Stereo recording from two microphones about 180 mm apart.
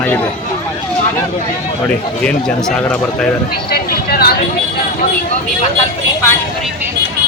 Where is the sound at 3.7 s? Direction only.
60° left (ahead or behind).